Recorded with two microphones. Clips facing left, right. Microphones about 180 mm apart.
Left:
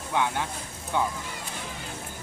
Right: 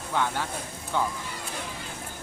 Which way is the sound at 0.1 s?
15° left (ahead or behind).